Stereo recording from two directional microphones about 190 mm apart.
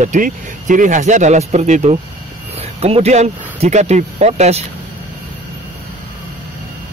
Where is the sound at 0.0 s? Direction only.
40° right (ahead or behind).